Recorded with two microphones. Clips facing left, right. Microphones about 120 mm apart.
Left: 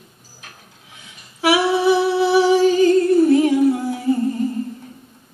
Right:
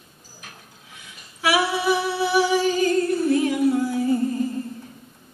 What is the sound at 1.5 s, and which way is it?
Humming, 25° left (ahead or behind).